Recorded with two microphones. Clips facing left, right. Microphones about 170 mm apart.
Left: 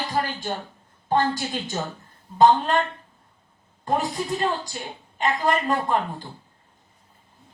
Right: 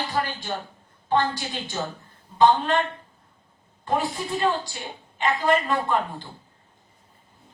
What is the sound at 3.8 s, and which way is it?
A woman's voice, 40° left (ahead or behind).